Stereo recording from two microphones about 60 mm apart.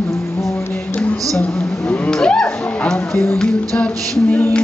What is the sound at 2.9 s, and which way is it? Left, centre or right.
Speech, left.